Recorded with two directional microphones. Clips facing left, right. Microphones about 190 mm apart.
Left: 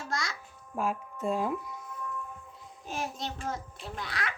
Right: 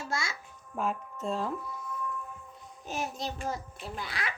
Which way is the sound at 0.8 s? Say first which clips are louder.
Left 1 dB; 10° left (ahead or behind).